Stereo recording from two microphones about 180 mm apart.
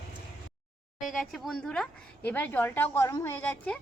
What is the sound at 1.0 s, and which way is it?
Speech, centre (ahead or behind).